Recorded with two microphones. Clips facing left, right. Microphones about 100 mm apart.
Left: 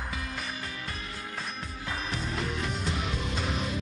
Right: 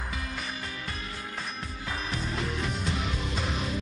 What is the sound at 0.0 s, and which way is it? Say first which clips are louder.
Music: even; centre (ahead or behind).